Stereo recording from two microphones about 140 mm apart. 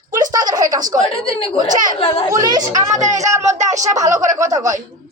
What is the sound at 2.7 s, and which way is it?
Speech, 60° right (ahead or behind).